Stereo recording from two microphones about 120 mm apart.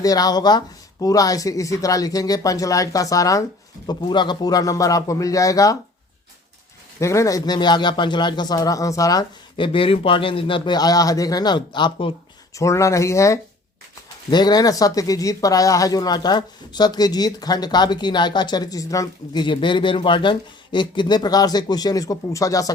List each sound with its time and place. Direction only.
0.0 s speech: 30° left (ahead or behind)
3.8 s speech: 40° left (ahead or behind)
7.0 s speech: 25° left (ahead or behind)
9.6 s speech: 45° left (ahead or behind)
12.5 s speech: 25° left (ahead or behind)
14.3 s speech: 35° left (ahead or behind)